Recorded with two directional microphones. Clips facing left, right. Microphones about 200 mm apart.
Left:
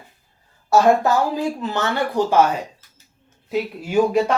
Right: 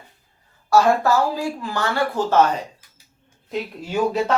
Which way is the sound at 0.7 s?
20° left (ahead or behind).